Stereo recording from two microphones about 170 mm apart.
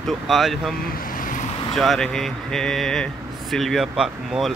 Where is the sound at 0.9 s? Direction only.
55° left (ahead or behind).